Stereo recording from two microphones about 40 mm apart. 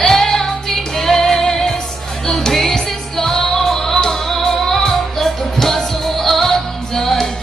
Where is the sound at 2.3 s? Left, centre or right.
Centre.